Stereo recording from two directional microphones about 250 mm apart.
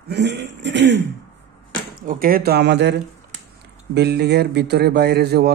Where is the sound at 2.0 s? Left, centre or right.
Right.